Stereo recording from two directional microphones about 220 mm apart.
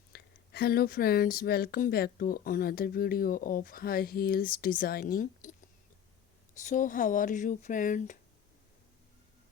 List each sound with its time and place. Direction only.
0.1 s speech: 45° left (ahead or behind)